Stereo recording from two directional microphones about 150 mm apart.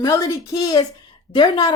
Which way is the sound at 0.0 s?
20° left (ahead or behind).